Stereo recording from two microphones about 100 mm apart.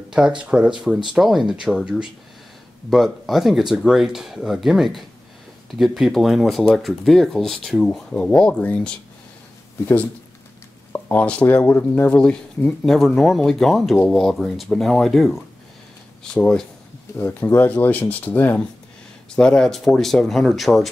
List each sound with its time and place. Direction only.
0.4 s speech: 10° right (ahead or behind); by 9.0 s 10° left (ahead or behind)
10.9 s speech: 15° left (ahead or behind)
17.2 s speech: 20° left (ahead or behind)
19.3 s speech: 10° left (ahead or behind)